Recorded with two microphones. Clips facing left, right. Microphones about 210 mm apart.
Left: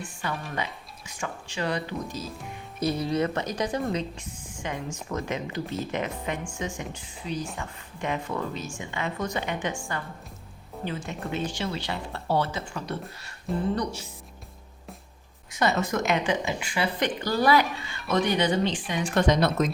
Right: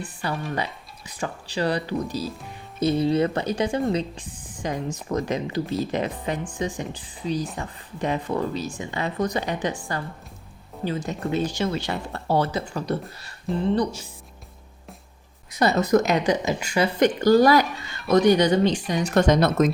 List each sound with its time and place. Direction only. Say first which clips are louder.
0.0 s speech: right 4 dB; 35° right (ahead or behind)
13.5 s speech: right 3 dB; centre (ahead or behind)
15.5 s speech: right 6 dB; 35° right (ahead or behind)